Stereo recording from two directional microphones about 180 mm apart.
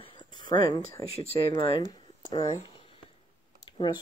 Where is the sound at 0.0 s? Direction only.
25° left (ahead or behind).